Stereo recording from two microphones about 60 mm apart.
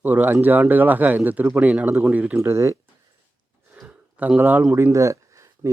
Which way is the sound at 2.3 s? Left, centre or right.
Right.